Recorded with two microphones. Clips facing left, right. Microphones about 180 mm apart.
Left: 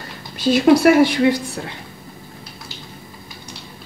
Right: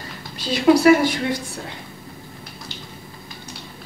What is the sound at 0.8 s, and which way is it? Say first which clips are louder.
Speech: left 3 dB; 65° left (ahead or behind).